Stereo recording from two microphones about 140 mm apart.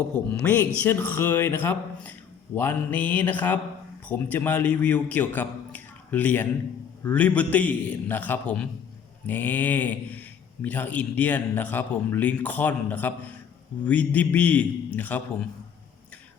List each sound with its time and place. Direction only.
0.1 s a man's voice: 10° left (ahead or behind)